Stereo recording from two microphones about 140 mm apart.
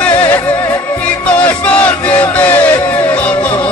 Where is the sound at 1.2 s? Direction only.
10° left (ahead or behind).